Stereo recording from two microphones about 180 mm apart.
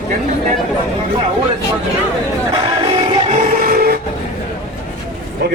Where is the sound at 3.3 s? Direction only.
55° right (ahead or behind).